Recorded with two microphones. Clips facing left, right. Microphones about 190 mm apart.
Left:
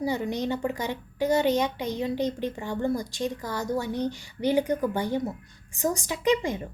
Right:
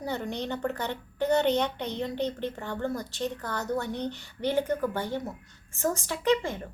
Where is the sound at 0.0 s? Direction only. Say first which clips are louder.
Left 5 dB; 10° left (ahead or behind).